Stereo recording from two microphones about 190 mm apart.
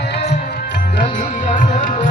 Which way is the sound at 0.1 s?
60° left (ahead or behind).